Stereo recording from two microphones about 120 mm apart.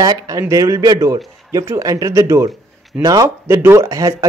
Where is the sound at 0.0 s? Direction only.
30° right (ahead or behind).